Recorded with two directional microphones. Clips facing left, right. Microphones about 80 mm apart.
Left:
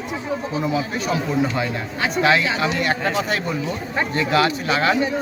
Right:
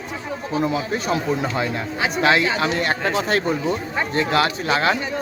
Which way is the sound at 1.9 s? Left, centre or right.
Centre.